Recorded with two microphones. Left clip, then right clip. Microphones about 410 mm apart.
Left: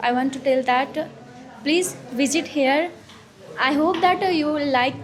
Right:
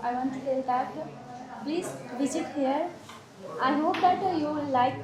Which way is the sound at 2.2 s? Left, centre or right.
Left.